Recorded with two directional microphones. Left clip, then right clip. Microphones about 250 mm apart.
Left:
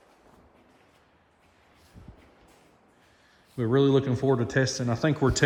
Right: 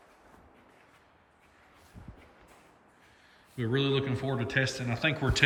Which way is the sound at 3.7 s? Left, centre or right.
Centre.